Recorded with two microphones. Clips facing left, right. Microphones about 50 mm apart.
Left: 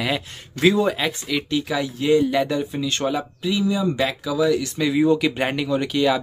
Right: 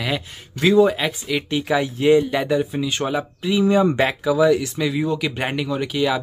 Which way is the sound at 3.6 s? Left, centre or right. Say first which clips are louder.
Right 6 dB; right.